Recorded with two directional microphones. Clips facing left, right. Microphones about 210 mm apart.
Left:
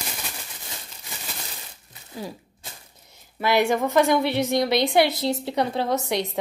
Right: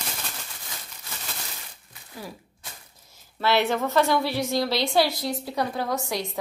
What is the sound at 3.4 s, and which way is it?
A woman's voice, 15° left (ahead or behind).